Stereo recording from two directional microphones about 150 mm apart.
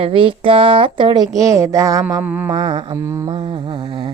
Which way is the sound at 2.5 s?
30° right (ahead or behind).